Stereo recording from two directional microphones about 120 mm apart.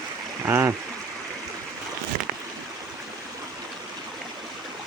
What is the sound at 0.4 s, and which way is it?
Speech, 20° right (ahead or behind).